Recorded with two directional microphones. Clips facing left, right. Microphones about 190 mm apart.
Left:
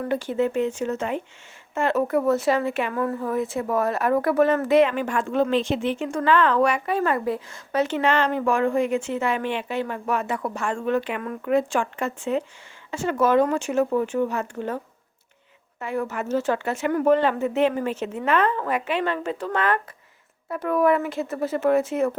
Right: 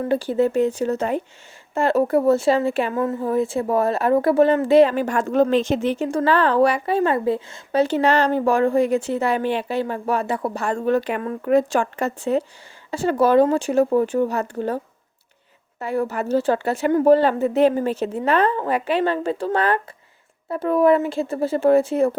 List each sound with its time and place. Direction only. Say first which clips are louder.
0.0 s speech: right 4 dB; 30° right (ahead or behind)
15.8 s speech: right 4 dB; 35° right (ahead or behind)